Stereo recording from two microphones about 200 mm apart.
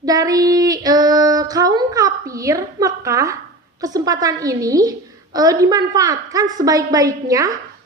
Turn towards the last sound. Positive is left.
turn(degrees=-15)  # may be behind; listen again after turning